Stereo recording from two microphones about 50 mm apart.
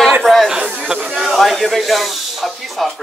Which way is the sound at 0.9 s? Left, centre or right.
Centre.